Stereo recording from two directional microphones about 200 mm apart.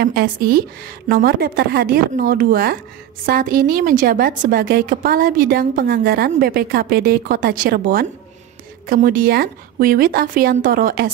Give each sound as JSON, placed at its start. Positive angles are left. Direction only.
{"t": 0.0, "sound": "a woman's voice", "side_deg": -50}